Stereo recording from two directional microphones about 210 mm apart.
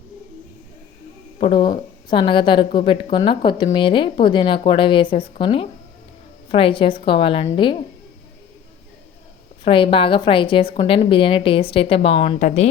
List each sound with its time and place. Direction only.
1.4 s a woman's voice: 25° left (ahead or behind)
9.6 s a woman's voice: 25° left (ahead or behind)